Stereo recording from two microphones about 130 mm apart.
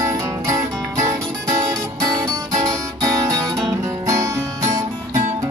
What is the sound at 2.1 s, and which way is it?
Music, 25° right (ahead or behind).